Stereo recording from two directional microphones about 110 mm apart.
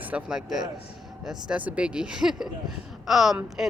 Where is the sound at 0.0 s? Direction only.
10° right (ahead or behind).